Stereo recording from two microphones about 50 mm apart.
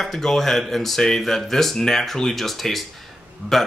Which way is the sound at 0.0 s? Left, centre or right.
Centre.